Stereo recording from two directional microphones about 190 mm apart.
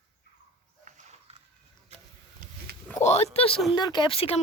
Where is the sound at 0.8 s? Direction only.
40° right (ahead or behind).